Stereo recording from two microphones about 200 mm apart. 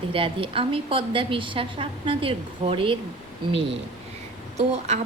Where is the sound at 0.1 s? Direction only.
25° right (ahead or behind).